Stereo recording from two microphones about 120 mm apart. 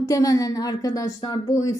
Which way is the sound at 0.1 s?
30° left (ahead or behind).